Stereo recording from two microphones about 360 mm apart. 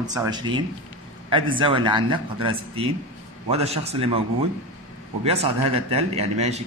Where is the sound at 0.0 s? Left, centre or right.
Centre.